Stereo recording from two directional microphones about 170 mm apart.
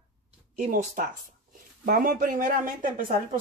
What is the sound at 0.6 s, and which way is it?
Speech, 50° right (ahead or behind).